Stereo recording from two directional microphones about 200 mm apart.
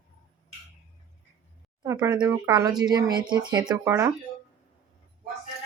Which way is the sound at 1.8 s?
15° right (ahead or behind).